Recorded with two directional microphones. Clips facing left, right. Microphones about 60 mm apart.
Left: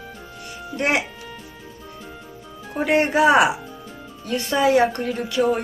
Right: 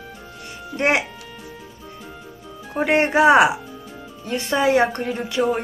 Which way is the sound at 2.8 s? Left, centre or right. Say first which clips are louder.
Right 1 dB; right.